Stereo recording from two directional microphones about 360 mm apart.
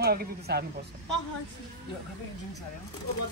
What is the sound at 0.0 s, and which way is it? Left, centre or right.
Speech, right.